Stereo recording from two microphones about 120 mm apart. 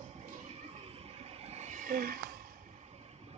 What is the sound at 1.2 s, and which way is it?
Vehicle, 55° right (ahead or behind).